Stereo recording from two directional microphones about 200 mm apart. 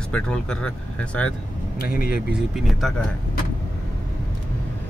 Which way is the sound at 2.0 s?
5° right (ahead or behind).